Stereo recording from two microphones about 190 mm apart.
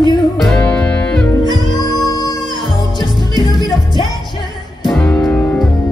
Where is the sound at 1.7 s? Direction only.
20° left (ahead or behind).